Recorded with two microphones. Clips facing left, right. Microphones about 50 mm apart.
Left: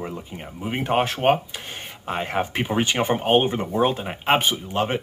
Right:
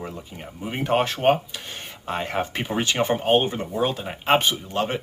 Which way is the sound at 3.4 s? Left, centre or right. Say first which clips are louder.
Left 3 dB; left.